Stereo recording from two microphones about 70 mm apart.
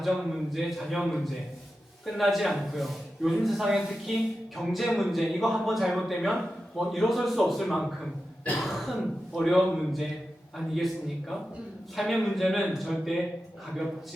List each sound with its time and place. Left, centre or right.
0.0 s a man's voice: centre